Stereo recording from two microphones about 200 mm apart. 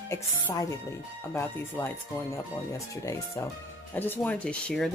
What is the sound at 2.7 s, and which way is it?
Speech, 15° left (ahead or behind).